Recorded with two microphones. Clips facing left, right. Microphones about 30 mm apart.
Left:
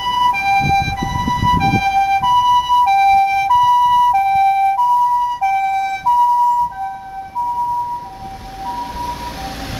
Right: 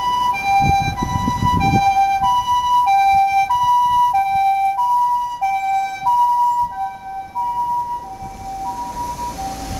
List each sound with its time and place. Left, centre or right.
0.0 s ambulance: centre
8.6 s emergency vehicle: left